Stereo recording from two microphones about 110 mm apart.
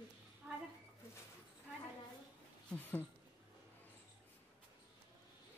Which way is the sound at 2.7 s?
15° left (ahead or behind).